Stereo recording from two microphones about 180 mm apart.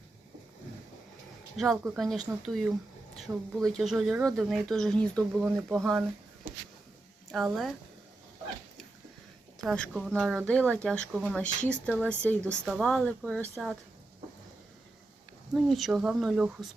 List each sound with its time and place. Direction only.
1.5 s speech: centre (ahead or behind)
7.3 s speech: centre (ahead or behind)
9.6 s speech: 5° left (ahead or behind)
15.5 s speech: centre (ahead or behind)